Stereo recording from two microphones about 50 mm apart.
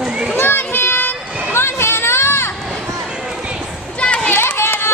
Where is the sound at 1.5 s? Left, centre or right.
Left.